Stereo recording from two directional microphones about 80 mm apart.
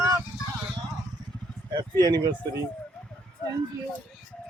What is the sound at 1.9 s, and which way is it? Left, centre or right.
Speech, right.